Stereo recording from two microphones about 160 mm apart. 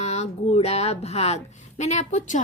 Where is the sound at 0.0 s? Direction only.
45° left (ahead or behind).